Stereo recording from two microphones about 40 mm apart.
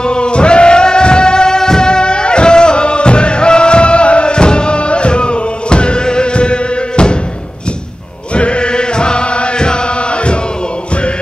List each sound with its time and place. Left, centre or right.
0.0 s music: left
8.4 s chant: left